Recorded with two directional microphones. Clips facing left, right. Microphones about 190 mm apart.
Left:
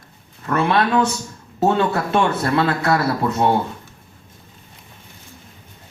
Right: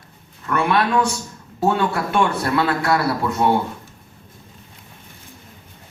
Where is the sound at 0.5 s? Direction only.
25° left (ahead or behind).